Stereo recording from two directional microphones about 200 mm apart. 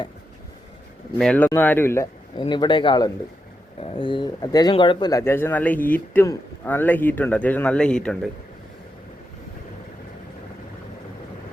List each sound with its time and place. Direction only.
1.2 s speech: 5° left (ahead or behind)